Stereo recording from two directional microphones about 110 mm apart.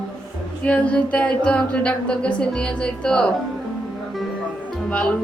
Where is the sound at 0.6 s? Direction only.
10° left (ahead or behind).